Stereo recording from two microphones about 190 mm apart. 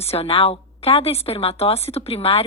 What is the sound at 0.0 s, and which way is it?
Speech, 30° left (ahead or behind).